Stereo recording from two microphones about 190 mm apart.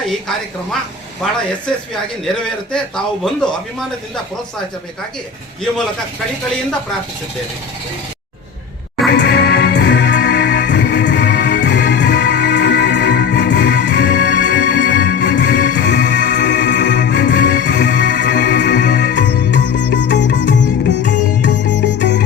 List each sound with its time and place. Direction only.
2.2 s a man's voice: 5° left (ahead or behind)
9.1 s music: 60° left (ahead or behind)